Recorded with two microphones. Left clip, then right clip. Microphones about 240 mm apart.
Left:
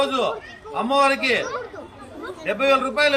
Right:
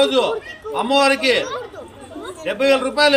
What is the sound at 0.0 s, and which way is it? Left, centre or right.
A man's voice, centre.